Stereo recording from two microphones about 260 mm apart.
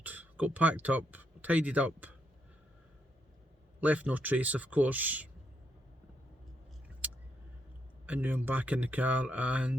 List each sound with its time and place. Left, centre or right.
0.0 s speech: centre
3.8 s speech: centre
8.0 s speech: centre